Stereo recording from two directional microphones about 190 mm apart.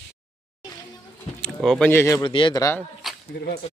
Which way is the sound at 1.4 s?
Centre (ahead or behind).